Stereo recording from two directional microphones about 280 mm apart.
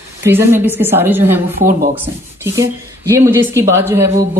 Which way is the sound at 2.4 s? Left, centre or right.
Centre.